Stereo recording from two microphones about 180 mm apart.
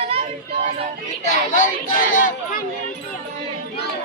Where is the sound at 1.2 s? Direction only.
45° left (ahead or behind).